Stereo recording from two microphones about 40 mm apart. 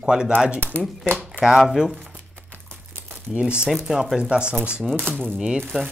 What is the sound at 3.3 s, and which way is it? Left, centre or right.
Speech, right.